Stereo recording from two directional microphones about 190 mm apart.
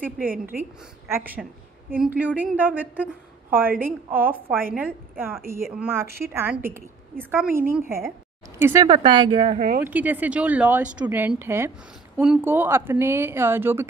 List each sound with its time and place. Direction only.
0.2 s a woman's voice: 50° right (ahead or behind)
1.1 s a woman's voice: 10° right (ahead or behind)
8.8 s speech: 25° right (ahead or behind)
9.8 s a woman's voice: 10° right (ahead or behind)